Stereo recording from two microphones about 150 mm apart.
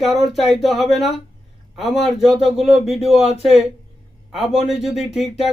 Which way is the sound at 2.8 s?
45° left (ahead or behind).